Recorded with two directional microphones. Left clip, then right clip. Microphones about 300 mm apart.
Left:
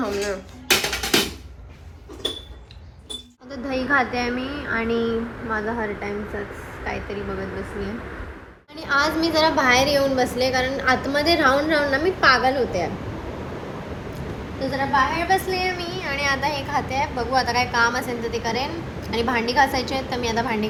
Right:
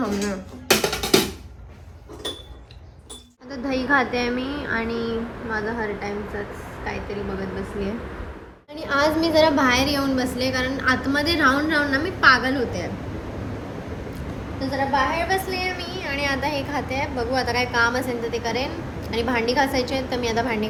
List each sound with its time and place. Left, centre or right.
3.5 s a woman's voice: centre
14.7 s a woman's voice: centre